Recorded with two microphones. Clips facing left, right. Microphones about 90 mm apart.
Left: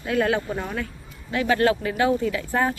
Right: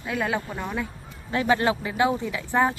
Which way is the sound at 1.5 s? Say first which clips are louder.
Left 2 dB; 20° right (ahead or behind).